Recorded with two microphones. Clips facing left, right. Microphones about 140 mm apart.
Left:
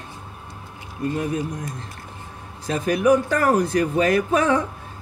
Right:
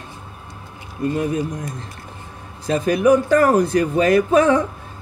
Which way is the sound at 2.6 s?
30° right (ahead or behind).